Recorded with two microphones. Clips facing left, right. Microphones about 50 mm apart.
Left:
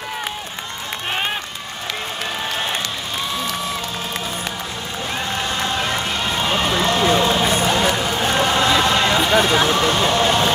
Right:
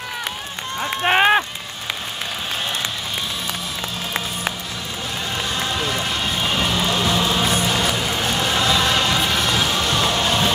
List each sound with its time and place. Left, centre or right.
1.0 s run: right
5.6 s run: left
7.4 s music: left